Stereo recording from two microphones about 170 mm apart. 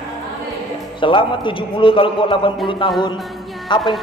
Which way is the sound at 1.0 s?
30° left (ahead or behind).